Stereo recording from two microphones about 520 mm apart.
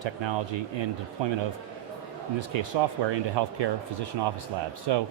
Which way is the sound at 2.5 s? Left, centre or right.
Right.